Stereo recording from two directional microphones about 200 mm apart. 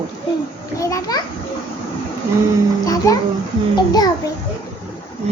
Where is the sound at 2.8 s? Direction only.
15° left (ahead or behind).